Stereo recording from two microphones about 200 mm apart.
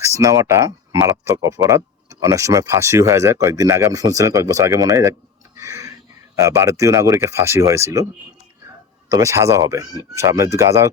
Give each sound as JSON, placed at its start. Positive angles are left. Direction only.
{"t": 0.2, "sound": "speech", "side_deg": -15}
{"t": 5.5, "sound": "a sound", "side_deg": -15}
{"t": 6.3, "sound": "speech", "side_deg": -15}
{"t": 9.1, "sound": "speech", "side_deg": -15}